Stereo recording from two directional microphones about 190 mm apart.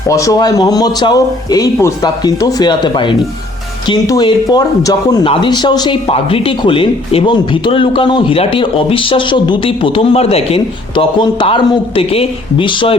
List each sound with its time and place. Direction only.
0.1 s speech: 15° left (ahead or behind)